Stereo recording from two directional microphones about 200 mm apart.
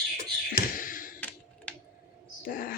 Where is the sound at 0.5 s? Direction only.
45° left (ahead or behind).